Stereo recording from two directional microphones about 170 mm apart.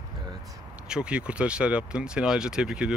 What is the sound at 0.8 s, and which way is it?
Speech, 5° right (ahead or behind).